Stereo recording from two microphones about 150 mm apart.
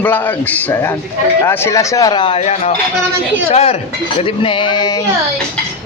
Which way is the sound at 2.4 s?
45° left (ahead or behind).